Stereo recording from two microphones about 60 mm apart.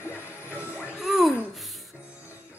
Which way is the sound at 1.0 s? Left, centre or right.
Centre.